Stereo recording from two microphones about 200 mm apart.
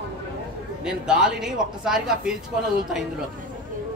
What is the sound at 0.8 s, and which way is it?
A woman's voice, 5° right (ahead or behind).